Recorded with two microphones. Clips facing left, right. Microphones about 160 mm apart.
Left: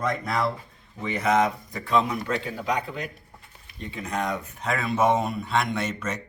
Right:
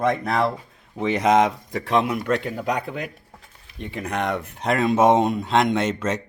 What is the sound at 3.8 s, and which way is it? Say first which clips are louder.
Speech: right 3 dB; 65° right (ahead or behind).